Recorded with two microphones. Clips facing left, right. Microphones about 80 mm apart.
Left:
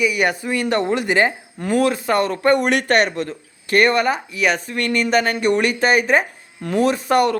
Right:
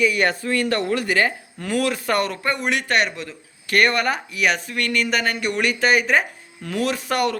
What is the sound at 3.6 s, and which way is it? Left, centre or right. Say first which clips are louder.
Speech: left 3 dB; left.